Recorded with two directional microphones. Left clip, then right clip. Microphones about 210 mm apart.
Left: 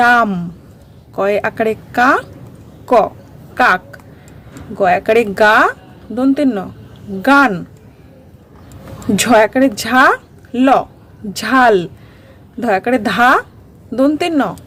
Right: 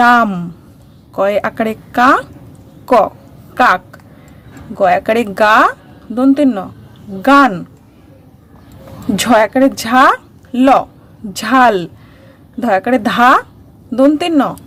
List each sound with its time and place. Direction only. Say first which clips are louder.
0.0 s a woman's voice: right 1 dB; 10° right (ahead or behind)
9.1 s speech: even; centre (ahead or behind)